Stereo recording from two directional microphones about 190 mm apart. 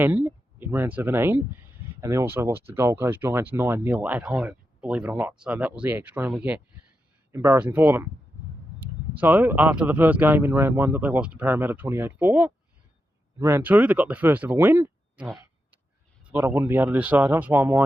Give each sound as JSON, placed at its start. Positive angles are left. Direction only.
{"t": 0.0, "sound": "speech", "side_deg": -10}